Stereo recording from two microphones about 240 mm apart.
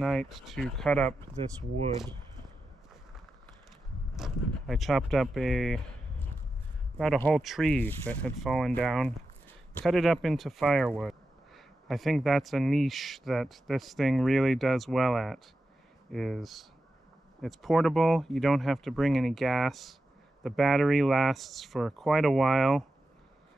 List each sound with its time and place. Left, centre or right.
0.0 s speech: centre
1.4 s speech: right
4.2 s speech: centre
7.0 s speech: centre